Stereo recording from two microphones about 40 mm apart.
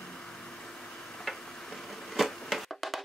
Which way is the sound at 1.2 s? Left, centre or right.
Centre.